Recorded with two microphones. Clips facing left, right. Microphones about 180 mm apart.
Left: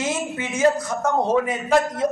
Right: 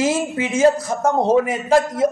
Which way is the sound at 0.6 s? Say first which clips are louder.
Right 3 dB; 25° right (ahead or behind).